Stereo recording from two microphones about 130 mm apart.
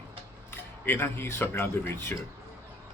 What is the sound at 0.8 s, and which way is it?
Speech, 15° left (ahead or behind).